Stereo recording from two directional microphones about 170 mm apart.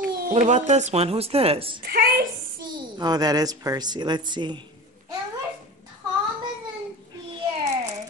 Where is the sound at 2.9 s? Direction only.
25° right (ahead or behind).